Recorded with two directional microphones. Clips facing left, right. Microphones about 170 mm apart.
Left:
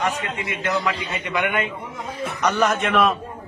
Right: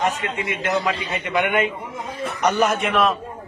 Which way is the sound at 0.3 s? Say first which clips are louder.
Right 2 dB; 15° right (ahead or behind).